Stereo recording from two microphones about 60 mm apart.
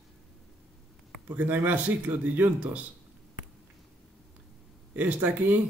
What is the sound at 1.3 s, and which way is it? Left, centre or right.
A man's voice, right.